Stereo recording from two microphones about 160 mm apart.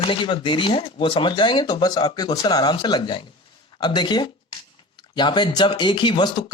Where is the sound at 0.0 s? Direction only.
30° left (ahead or behind).